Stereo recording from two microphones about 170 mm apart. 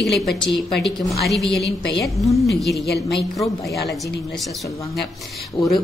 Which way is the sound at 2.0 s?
20° left (ahead or behind).